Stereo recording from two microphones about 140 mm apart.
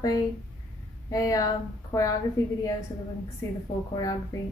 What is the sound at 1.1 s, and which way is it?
Speech, 25° left (ahead or behind).